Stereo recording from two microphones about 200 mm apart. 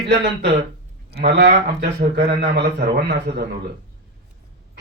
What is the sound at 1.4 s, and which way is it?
Speech, 55° right (ahead or behind).